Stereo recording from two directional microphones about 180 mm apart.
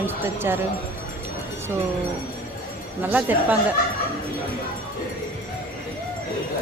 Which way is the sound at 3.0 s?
10° right (ahead or behind).